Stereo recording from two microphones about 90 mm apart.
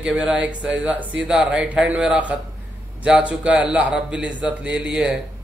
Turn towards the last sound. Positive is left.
turn(degrees=-10)  # may be behind; listen again after turning